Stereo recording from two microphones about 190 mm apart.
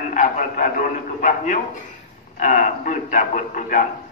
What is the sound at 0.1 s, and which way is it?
A man's voice, 40° left (ahead or behind).